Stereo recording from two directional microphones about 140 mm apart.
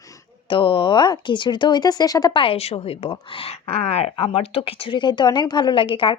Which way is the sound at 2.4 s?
45° left (ahead or behind).